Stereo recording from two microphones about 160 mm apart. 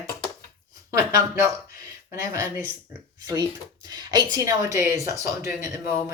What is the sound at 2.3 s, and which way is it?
Speech, 15° right (ahead or behind).